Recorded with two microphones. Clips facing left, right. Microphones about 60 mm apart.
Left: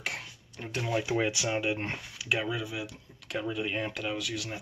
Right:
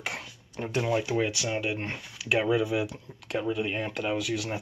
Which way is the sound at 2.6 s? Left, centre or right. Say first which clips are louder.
Right 9 dB; right.